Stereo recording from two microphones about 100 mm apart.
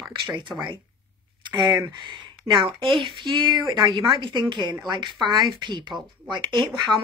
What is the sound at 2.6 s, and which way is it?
Speech, 55° right (ahead or behind).